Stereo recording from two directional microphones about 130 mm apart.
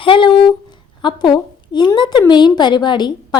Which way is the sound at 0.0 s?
40° left (ahead or behind).